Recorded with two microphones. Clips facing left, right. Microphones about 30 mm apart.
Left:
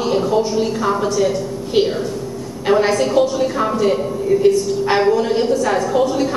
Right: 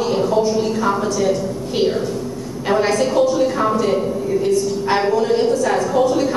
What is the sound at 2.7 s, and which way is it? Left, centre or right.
A woman's voice, centre.